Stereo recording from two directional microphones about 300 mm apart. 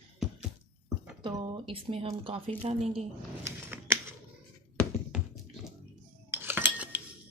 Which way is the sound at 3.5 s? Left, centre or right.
Centre.